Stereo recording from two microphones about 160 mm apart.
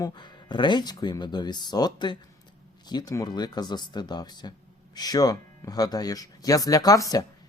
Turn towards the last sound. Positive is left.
turn(degrees=20)  # may be behind; listen again after turning